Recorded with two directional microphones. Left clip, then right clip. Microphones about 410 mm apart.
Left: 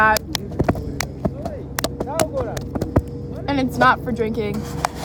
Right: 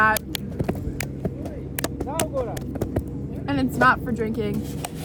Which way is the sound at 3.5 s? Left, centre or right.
Centre.